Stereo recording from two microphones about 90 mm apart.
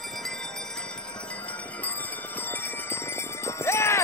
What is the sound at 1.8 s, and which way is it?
Bell, 20° left (ahead or behind).